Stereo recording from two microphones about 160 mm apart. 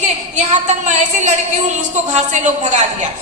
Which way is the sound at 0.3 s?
45° right (ahead or behind).